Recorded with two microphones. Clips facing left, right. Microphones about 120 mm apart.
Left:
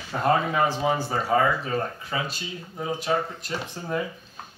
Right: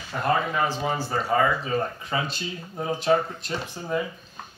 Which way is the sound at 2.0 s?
25° right (ahead or behind).